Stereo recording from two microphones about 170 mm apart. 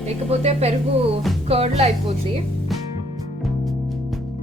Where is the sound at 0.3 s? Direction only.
40° right (ahead or behind).